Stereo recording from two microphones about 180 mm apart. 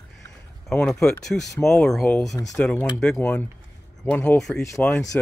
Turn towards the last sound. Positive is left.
turn(degrees=15)  # may be behind; listen again after turning